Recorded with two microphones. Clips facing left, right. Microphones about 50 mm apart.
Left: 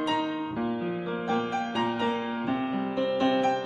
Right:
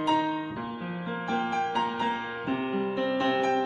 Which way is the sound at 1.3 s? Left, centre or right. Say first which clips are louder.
Right 2 dB; right.